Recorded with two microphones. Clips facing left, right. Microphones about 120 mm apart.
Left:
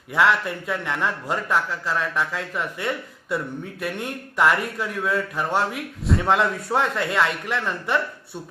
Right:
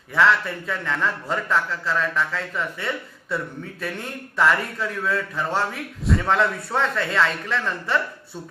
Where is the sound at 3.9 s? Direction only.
15° left (ahead or behind).